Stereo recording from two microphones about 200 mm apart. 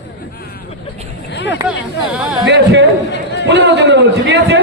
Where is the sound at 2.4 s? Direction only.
60° right (ahead or behind).